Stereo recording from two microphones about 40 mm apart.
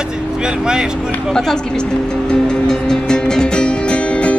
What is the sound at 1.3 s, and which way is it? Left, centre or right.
Music, centre.